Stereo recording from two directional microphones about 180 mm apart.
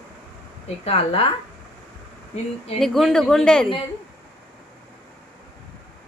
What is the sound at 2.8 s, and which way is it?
Speech, centre (ahead or behind).